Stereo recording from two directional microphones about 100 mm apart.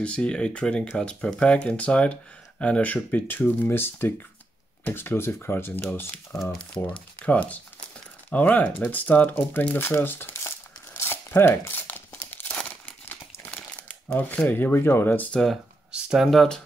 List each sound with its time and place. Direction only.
0.0 s speech: 10° left (ahead or behind)
6.3 s speech: centre (ahead or behind)
6.8 s speech: 15° left (ahead or behind)
11.0 s crumpling: 25° left (ahead or behind)
14.5 s speech: 20° left (ahead or behind)
15.4 s speech: 5° right (ahead or behind)